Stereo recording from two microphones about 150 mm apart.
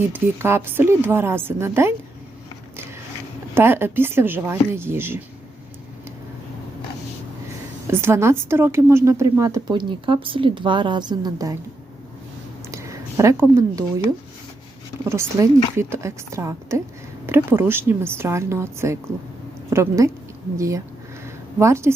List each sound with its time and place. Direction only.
0.1 s a woman's voice: 15° right (ahead or behind)
3.5 s a woman's voice: 15° right (ahead or behind)
7.9 s speech: 15° right (ahead or behind)
12.7 s a sound: 20° right (ahead or behind)
15.0 s a woman's voice: 15° right (ahead or behind)